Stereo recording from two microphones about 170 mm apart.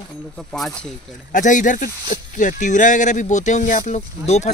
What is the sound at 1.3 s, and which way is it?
Speech, 50° left (ahead or behind).